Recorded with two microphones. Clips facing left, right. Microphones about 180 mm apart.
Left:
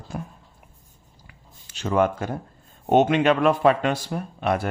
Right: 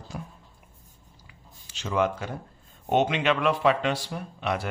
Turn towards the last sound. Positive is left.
turn(degrees=50)  # may be behind; listen again after turning